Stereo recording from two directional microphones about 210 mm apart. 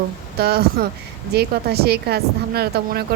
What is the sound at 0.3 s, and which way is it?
Speech, 45° right (ahead or behind).